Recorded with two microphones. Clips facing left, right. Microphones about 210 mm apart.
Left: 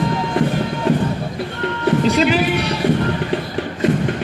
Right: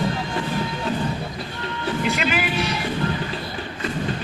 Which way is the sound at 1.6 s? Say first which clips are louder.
Left 9 dB; 65° left (ahead or behind).